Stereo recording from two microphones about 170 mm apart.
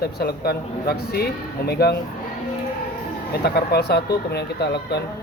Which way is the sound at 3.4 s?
70° left (ahead or behind).